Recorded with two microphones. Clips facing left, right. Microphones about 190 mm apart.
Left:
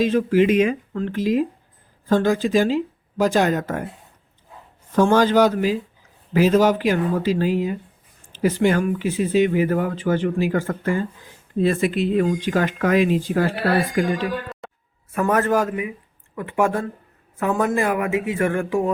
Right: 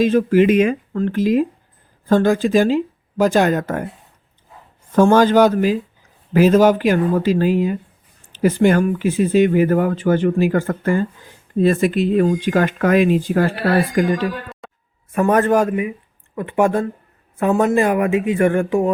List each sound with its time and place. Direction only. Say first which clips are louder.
0.0 s speech: right 3 dB; 50° right (ahead or behind)
4.9 s speech: right 4 dB; 50° right (ahead or behind)
14.6 s a sound: left 1 dB; centre (ahead or behind)
15.1 s speech: right 4 dB; 30° right (ahead or behind)